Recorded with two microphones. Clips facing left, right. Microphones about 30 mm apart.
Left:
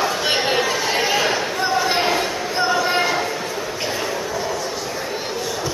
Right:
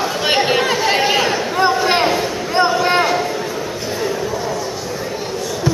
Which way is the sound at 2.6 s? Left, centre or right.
Centre.